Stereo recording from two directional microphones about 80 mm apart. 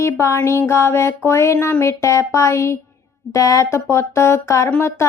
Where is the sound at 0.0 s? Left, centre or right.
Left.